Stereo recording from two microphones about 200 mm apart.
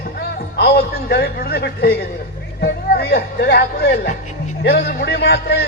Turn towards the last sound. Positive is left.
turn(degrees=55)  # may be behind; listen again after turning